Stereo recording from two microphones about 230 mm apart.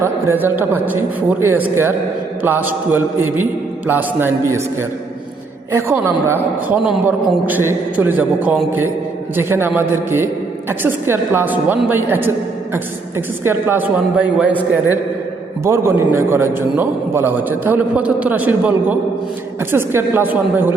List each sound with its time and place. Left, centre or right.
0.0 s a man's voice: centre
15.6 s a man's voice: centre